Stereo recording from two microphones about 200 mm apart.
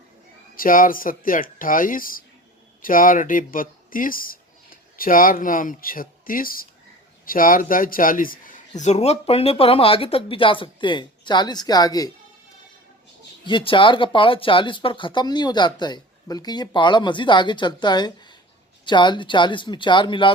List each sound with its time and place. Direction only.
0.5 s speech: 45° left (ahead or behind); by 12.1 s 20° left (ahead or behind)
13.4 s speech: 25° left (ahead or behind)